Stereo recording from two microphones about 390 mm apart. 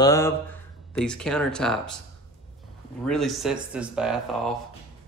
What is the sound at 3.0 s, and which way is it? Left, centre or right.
Speech, centre.